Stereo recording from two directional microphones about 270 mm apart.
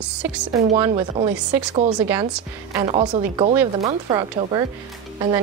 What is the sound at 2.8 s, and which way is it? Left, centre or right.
Speech, right.